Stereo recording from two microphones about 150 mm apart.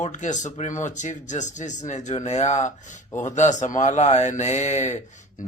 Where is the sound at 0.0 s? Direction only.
55° left (ahead or behind).